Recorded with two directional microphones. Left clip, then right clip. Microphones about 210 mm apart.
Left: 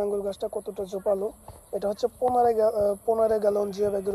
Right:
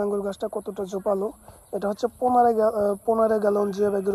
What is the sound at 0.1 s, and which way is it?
Speech, 30° right (ahead or behind).